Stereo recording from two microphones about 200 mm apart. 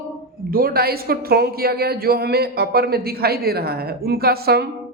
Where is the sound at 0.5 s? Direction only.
50° right (ahead or behind).